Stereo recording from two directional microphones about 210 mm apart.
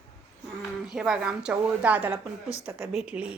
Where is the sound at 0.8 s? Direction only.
Centre (ahead or behind).